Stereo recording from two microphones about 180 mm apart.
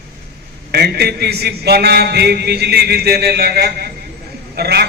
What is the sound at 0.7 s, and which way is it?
A man's voice, 60° right (ahead or behind).